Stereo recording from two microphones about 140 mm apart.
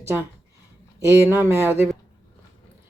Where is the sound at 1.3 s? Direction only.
15° right (ahead or behind).